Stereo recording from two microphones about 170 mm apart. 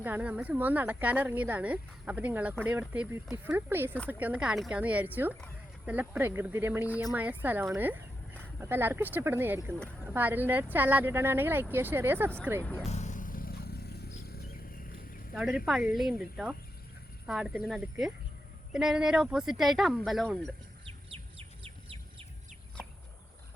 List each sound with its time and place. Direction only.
0.0 s speech: 10° right (ahead or behind)
12.9 s vehicle: 45° left (ahead or behind); by 14.1 s 70° left (ahead or behind)
15.4 s speech: 5° right (ahead or behind)
20.8 s bird: 30° right (ahead or behind)